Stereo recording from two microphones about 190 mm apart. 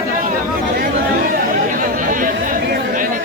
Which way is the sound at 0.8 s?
50° right (ahead or behind).